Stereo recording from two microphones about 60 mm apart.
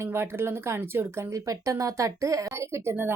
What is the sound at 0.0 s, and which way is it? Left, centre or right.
Speech, right.